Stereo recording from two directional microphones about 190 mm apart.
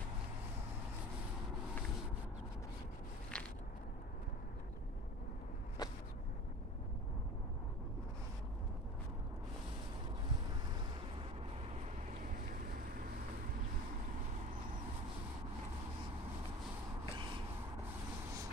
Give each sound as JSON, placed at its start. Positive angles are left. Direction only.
{"t": 3.3, "sound": "biting", "side_deg": 5}
{"t": 5.8, "sound": "vehicle", "side_deg": 20}